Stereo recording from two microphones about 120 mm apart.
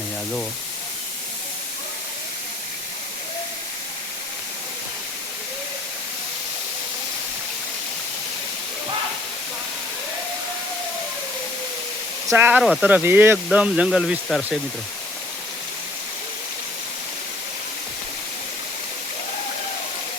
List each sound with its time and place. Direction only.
12.3 s speech: 20° right (ahead or behind)
12.6 s speech: centre (ahead or behind)
12.9 s speech: 15° right (ahead or behind); by 14.6 s centre (ahead or behind)